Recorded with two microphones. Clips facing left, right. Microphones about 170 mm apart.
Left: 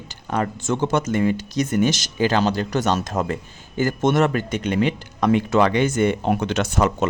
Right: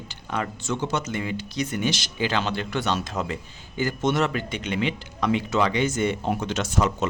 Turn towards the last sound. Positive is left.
turn(degrees=60)  # may be behind; listen again after turning